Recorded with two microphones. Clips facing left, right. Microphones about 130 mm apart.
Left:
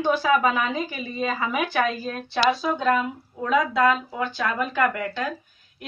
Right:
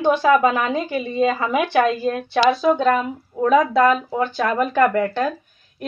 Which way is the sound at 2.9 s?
45° right (ahead or behind).